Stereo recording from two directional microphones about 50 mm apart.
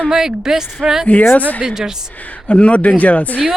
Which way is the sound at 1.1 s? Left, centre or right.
Left.